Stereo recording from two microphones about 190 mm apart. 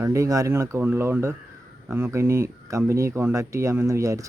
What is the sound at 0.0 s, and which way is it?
Speech, 15° right (ahead or behind).